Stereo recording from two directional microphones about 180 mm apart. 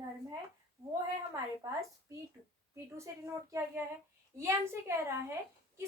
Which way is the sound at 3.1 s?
15° right (ahead or behind).